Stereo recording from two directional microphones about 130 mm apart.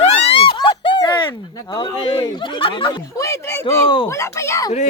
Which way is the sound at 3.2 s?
25° left (ahead or behind).